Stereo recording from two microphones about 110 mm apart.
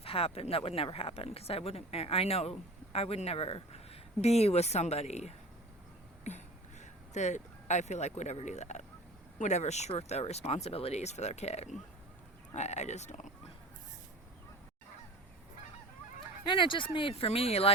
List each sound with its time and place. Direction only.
0.0 s speech: 60° left (ahead or behind)
4.2 s speech: 75° left (ahead or behind)
6.2 s speech: 90° left
16.5 s speech: 50° left (ahead or behind); by 17.7 s 65° left (ahead or behind)